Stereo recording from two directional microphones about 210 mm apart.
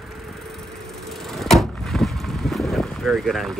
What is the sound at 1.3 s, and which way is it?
Vehicle, centre (ahead or behind).